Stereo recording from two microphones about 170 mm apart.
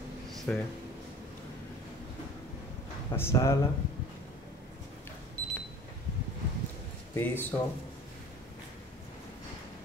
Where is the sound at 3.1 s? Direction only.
15° left (ahead or behind).